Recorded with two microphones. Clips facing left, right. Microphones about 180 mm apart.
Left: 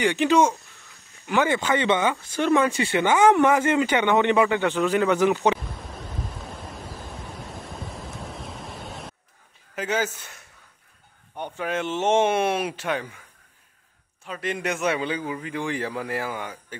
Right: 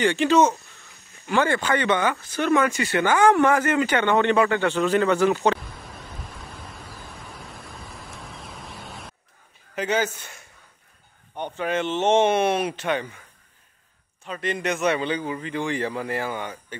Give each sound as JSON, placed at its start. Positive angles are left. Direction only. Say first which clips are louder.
{"t": 0.0, "sound": "speech", "louder": "right 1 dB", "side_deg": 15}
{"t": 8.2, "sound": "a sound", "louder": "left 4 dB", "side_deg": 0}
{"t": 9.8, "sound": "a man's voice", "louder": "right 2 dB", "side_deg": 5}
{"t": 14.2, "sound": "a man's voice", "louder": "right 1 dB", "side_deg": 5}